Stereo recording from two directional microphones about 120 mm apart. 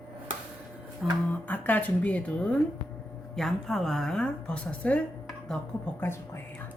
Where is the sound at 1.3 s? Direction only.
15° left (ahead or behind).